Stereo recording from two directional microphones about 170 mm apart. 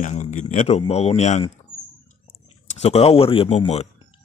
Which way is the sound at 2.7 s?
40° left (ahead or behind).